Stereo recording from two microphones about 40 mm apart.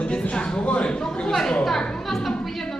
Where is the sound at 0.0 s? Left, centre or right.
Left.